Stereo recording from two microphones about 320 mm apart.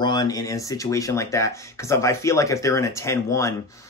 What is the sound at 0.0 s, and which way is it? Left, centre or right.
Speech, centre.